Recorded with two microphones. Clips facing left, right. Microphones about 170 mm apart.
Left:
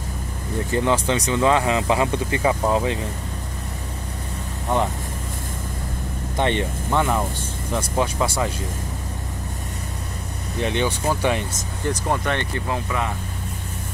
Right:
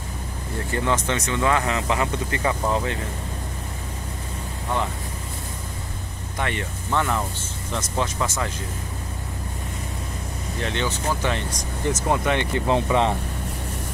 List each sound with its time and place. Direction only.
0.7 s speech: 15° left (ahead or behind)
6.3 s speech: 25° left (ahead or behind)
6.9 s speech: 15° left (ahead or behind)
10.6 s speech: 15° left (ahead or behind)
12.1 s speech: 15° right (ahead or behind)